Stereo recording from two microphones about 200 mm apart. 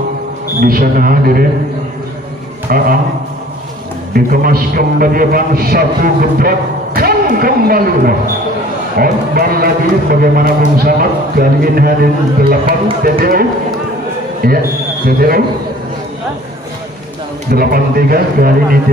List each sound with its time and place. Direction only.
0.6 s a man's voice: 45° right (ahead or behind)
2.7 s a man's voice: 45° right (ahead or behind)
4.1 s a man's voice: 45° right (ahead or behind)
17.5 s a man's voice: 50° right (ahead or behind)